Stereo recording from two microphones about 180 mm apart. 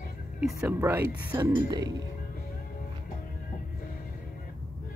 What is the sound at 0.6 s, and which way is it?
Speech, 10° right (ahead or behind).